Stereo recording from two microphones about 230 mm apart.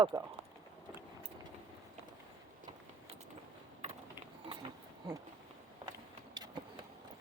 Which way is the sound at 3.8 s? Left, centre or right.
Right.